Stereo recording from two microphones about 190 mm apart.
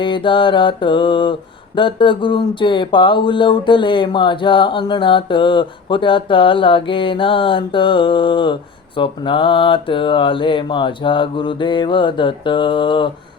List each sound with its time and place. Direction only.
0.0 s mantra: 25° left (ahead or behind)